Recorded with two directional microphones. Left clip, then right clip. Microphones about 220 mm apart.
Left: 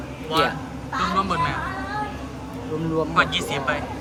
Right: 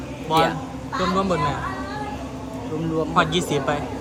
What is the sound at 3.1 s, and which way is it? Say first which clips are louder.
Speech: right 1 dB; 20° right (ahead or behind).